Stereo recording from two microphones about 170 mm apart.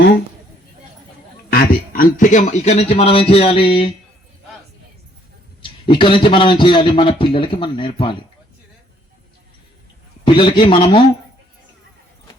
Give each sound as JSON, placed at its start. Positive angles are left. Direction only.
{"t": 1.5, "sound": "speech", "side_deg": 60}
{"t": 5.8, "sound": "a man's voice", "side_deg": 30}
{"t": 10.2, "sound": "a man's voice", "side_deg": 25}